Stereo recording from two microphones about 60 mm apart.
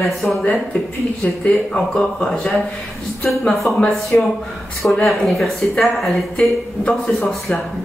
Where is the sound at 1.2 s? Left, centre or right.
Left.